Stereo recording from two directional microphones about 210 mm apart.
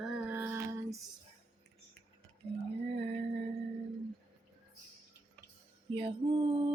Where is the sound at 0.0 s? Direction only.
Centre (ahead or behind).